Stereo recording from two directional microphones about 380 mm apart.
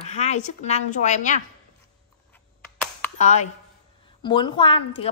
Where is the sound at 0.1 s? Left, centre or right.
Centre.